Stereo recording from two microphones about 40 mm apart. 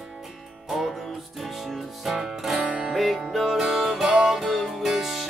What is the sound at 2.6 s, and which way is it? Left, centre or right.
Music, right.